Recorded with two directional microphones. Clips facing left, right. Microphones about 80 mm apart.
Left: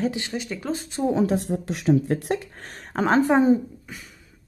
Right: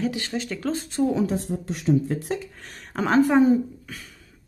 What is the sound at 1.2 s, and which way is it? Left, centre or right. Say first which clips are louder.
Speech: left 3 dB; left.